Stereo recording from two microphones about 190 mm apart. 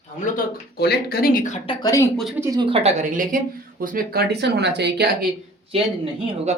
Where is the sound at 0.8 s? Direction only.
55° left (ahead or behind); by 1.7 s 40° left (ahead or behind).